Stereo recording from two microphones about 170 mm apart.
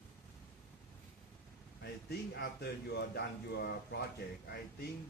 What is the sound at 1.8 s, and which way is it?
Speech, 70° left (ahead or behind).